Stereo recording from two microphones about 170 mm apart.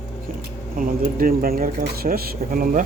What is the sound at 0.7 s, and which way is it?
Speech, 55° right (ahead or behind).